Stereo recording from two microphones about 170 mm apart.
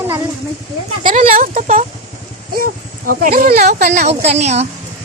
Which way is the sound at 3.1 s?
60° right (ahead or behind).